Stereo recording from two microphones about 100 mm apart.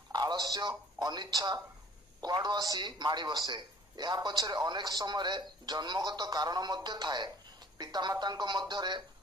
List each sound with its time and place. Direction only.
0.1 s a man's voice: 45° right (ahead or behind)